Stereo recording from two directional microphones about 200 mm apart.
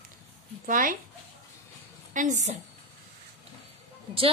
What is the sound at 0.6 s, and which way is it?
Speech, 45° right (ahead or behind).